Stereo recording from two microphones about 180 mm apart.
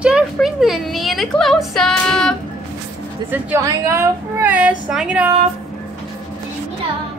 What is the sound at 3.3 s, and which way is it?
A woman's voice, 15° right (ahead or behind).